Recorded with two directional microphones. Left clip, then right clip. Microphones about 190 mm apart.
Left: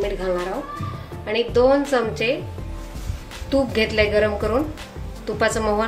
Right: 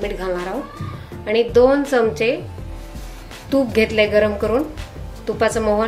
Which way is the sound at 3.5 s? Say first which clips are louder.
Right 3 dB; 20° right (ahead or behind).